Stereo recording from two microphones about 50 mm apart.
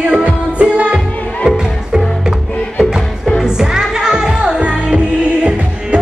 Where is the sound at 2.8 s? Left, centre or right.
Centre.